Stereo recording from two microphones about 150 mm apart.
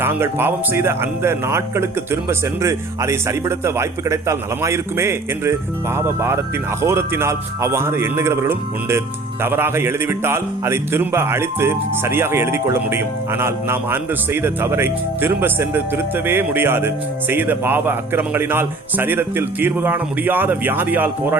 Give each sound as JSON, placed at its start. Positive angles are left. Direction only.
{"t": 0.0, "sound": "a man's voice", "side_deg": -15}